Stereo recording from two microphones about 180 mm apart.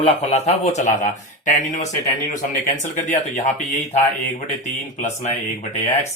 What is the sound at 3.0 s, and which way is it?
Speech, 45° left (ahead or behind).